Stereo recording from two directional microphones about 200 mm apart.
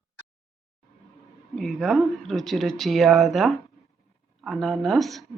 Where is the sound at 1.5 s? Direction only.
Centre (ahead or behind).